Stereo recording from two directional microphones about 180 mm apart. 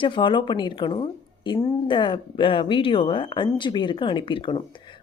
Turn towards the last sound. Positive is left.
turn(degrees=25)  # may be behind; listen again after turning